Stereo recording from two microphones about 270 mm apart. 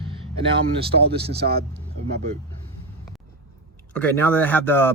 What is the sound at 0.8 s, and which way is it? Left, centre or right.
Speech, right.